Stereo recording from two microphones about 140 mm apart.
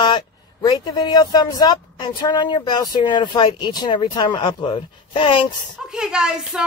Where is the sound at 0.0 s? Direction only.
30° left (ahead or behind).